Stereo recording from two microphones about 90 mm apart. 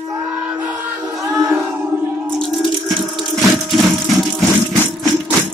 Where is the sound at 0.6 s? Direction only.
15° right (ahead or behind).